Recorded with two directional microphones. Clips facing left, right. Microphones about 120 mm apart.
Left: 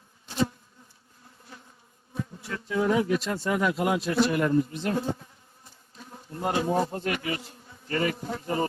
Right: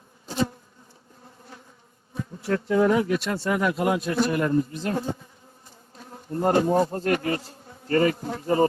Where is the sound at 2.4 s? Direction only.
50° right (ahead or behind); by 3.7 s 75° right (ahead or behind).